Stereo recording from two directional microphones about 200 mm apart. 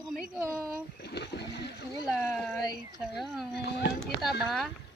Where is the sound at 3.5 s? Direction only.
55° left (ahead or behind).